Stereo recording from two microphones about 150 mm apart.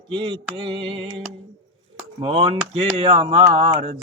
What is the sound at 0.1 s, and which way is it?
A man's voice, 35° right (ahead or behind).